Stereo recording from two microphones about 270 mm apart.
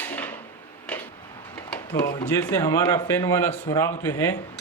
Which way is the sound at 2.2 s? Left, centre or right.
Centre.